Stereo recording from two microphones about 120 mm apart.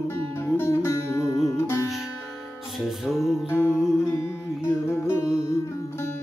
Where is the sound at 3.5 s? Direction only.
20° left (ahead or behind).